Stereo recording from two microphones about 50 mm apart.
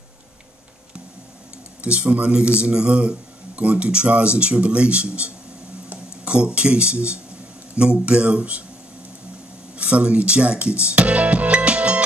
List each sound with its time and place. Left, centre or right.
1.8 s speech: right
9.8 s speech: right